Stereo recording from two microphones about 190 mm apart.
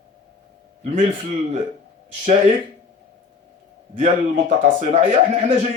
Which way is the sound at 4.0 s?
40° right (ahead or behind).